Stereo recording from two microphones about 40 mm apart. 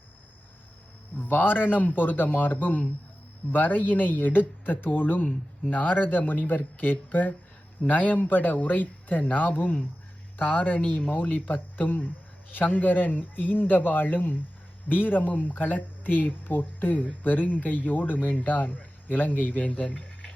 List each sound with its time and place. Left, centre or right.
1.2 s speech: left